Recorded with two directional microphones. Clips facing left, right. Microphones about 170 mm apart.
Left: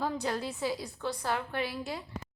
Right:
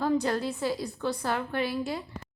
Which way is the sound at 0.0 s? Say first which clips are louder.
Right 6 dB; 5° left (ahead or behind).